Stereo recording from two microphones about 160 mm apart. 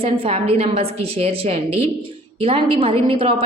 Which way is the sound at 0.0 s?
35° right (ahead or behind).